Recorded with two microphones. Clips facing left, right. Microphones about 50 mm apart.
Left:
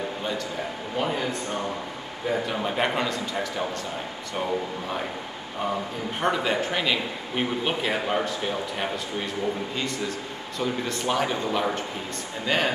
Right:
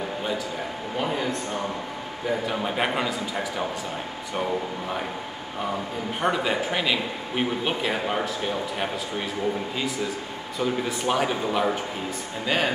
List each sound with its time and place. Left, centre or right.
0.9 s speech: centre
6.2 s speech: centre